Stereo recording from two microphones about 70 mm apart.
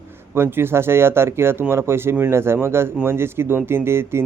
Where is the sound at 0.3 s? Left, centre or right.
Right.